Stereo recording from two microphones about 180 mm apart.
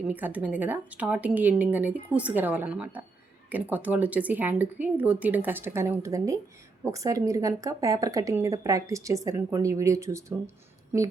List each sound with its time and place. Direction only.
0.1 s a woman's voice: 10° right (ahead or behind)